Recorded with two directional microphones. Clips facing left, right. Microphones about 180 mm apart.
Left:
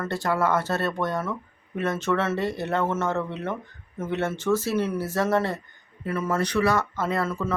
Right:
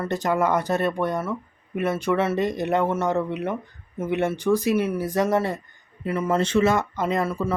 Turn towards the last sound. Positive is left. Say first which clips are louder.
# right 2 dB
turn(degrees=-15)  # may be behind; listen again after turning